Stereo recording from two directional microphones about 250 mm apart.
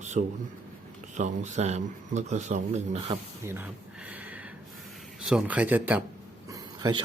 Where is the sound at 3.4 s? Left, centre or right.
Centre.